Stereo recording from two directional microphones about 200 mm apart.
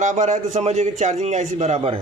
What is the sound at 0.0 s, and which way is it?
A man's voice, 35° right (ahead or behind).